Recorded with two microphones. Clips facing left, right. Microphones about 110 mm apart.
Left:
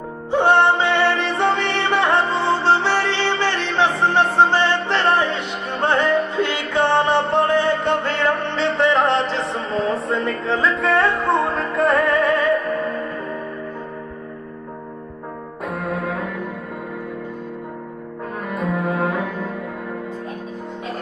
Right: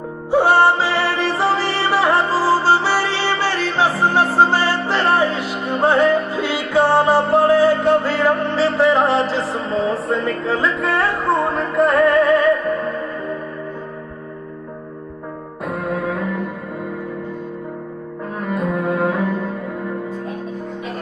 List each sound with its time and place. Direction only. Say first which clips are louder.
0.3 s music: right 2 dB; 5° right (ahead or behind)
15.6 s music: right 2 dB; centre (ahead or behind)
18.5 s cello: right 2 dB; centre (ahead or behind)